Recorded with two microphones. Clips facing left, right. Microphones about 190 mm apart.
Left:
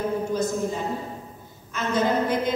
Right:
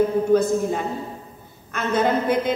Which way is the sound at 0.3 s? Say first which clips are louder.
Right 7 dB; 60° right (ahead or behind).